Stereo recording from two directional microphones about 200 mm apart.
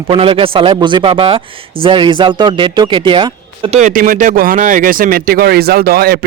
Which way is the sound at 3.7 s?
40° right (ahead or behind).